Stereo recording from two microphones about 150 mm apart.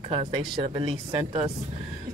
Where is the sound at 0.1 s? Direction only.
40° right (ahead or behind).